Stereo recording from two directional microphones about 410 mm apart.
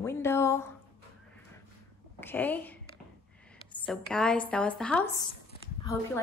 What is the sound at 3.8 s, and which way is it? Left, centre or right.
A woman's voice, centre.